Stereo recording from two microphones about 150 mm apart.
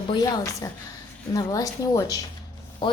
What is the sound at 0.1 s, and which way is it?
A man's voice, 30° left (ahead or behind).